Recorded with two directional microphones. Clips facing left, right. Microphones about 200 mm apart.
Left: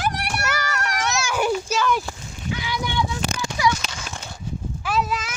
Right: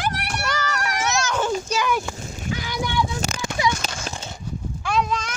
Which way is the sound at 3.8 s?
45° right (ahead or behind).